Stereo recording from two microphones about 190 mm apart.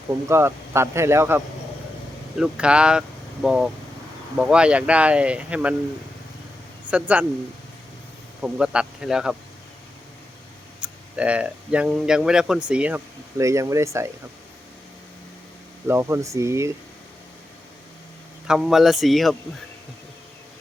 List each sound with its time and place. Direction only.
0.3 s speech: 15° right (ahead or behind)
2.4 s speech: 5° right (ahead or behind)
6.9 s speech: 5° right (ahead or behind)
8.4 s speech: 5° right (ahead or behind)
11.2 s speech: 5° right (ahead or behind)
15.9 s speech: 15° right (ahead or behind)
18.4 s speech: centre (ahead or behind)